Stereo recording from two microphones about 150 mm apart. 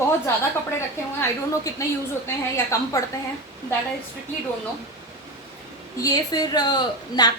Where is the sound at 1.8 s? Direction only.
20° left (ahead or behind).